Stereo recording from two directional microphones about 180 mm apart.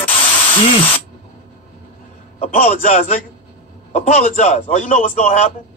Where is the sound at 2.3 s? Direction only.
40° left (ahead or behind).